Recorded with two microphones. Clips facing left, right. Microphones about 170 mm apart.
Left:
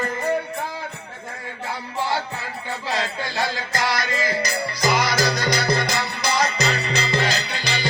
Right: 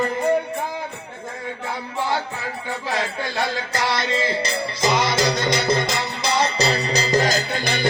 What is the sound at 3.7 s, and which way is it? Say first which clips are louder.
Music: right 2 dB; 25° right (ahead or behind).